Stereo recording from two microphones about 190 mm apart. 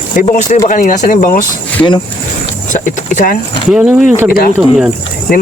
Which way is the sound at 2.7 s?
45° left (ahead or behind).